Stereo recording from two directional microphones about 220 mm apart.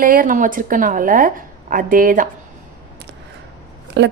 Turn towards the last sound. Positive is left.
turn(degrees=-50)  # may be behind; listen again after turning